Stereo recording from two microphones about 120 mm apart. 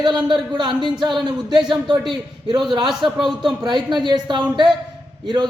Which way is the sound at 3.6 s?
40° right (ahead or behind).